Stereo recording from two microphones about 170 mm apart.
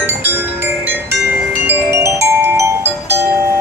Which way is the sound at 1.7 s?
15° right (ahead or behind).